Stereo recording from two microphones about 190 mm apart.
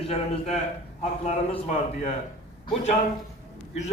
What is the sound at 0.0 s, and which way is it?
Speech, 30° left (ahead or behind).